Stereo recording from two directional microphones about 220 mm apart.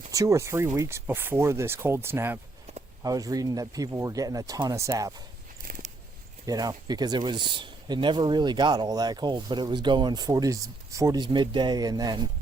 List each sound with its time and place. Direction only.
0.1 s speech: 15° right (ahead or behind)
5.6 s biting: 40° right (ahead or behind)
6.4 s speech: 15° right (ahead or behind)